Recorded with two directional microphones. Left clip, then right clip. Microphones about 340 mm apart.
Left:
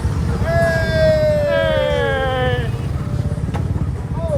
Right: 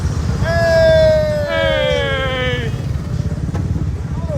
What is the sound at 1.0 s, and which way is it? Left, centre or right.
Cat, centre.